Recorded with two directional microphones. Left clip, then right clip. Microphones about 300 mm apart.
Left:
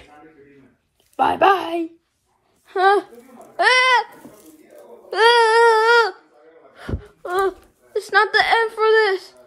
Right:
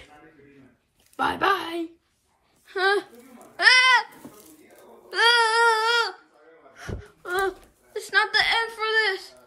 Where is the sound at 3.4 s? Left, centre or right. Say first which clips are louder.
Left 2 dB; centre.